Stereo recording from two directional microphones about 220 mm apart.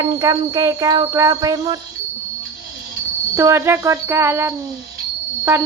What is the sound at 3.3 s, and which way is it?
Speech, 15° right (ahead or behind).